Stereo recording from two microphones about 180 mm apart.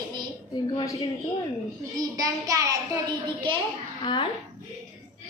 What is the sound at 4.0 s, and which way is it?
Speech, 25° left (ahead or behind).